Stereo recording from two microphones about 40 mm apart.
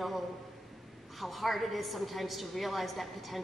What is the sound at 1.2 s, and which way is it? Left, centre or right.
A woman's voice, centre.